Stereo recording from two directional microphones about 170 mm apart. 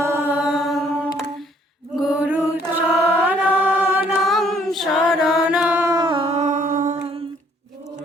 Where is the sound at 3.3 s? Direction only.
10° right (ahead or behind); by 6.4 s 30° right (ahead or behind).